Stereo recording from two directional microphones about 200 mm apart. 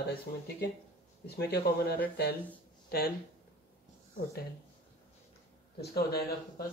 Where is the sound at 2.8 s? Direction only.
50° left (ahead or behind).